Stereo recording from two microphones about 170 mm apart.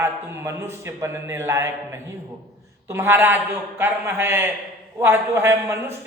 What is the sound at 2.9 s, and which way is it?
A man's voice, 15° right (ahead or behind).